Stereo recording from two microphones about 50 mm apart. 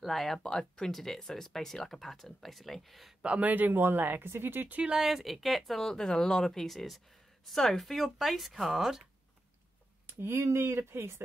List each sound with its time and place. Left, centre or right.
0.0 s speech: centre
0.4 s speech: centre
3.2 s speech: right
4.9 s speech: centre
10.0 s speech: right